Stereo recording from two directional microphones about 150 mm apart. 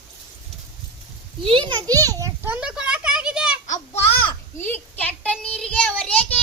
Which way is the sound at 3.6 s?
55° left (ahead or behind).